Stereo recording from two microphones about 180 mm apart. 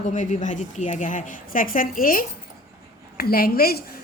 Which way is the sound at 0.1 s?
45° left (ahead or behind).